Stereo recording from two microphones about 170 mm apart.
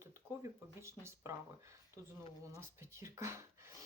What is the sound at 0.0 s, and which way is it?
Speech, 15° right (ahead or behind).